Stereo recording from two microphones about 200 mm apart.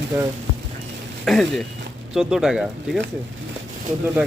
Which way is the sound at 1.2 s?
Centre (ahead or behind).